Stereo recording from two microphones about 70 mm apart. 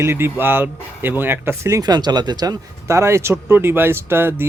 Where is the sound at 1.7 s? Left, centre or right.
Right.